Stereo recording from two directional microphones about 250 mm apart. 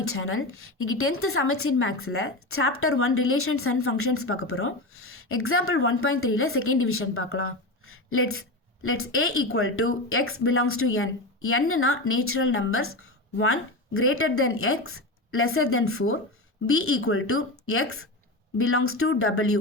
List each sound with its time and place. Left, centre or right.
0.0 s a woman's voice: left